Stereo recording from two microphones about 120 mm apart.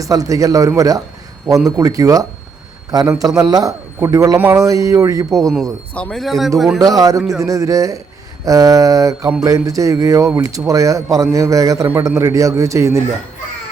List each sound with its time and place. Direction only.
0.0 s a man's voice: 30° right (ahead or behind)
4.4 s speech: 15° right (ahead or behind)
4.6 s a man's voice: 30° right (ahead or behind)
5.9 s speech: 10° left (ahead or behind)
6.7 s speech: 30° right (ahead or behind)
7.2 s speech: centre (ahead or behind)
7.4 s a man's voice: 30° right (ahead or behind)